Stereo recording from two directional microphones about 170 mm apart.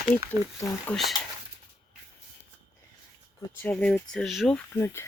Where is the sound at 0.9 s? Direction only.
5° left (ahead or behind).